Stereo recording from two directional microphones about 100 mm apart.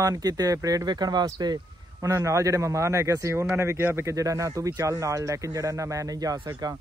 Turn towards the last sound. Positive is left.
turn(degrees=-35)  # may be behind; listen again after turning